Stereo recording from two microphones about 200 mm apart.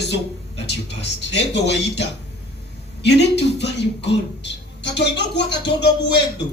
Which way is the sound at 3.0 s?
60° left (ahead or behind).